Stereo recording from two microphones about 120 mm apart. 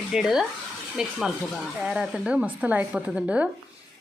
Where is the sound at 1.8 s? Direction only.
5° right (ahead or behind).